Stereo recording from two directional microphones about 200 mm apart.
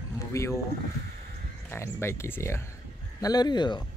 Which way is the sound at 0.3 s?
15° left (ahead or behind).